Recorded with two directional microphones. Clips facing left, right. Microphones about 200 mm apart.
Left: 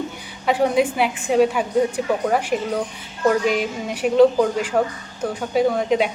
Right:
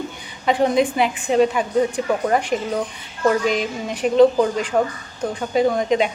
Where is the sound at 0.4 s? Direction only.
10° left (ahead or behind).